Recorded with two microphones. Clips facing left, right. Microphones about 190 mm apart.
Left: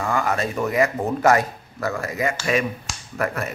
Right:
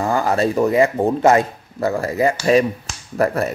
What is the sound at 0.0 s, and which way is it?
Speech, 35° right (ahead or behind).